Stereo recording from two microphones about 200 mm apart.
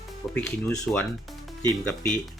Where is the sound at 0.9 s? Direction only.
Centre (ahead or behind).